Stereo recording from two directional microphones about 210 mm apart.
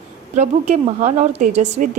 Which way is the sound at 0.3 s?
35° right (ahead or behind).